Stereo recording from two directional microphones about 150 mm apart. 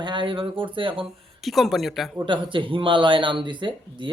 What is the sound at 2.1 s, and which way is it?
Speech, 30° right (ahead or behind).